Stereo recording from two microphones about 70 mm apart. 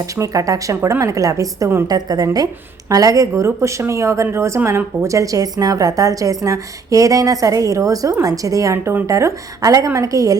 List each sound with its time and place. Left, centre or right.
0.0 s speech: right
1.9 s a woman's voice: right
5.0 s a woman's voice: right